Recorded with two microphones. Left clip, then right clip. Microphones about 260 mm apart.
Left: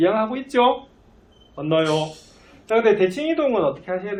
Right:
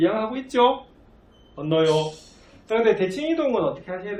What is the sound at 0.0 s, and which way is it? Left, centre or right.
Speech, centre.